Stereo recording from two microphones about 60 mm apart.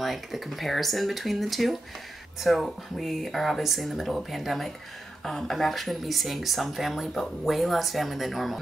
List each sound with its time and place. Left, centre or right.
0.0 s speech: centre